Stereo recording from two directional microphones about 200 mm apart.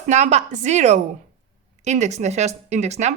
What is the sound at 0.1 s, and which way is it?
Speech, 35° right (ahead or behind).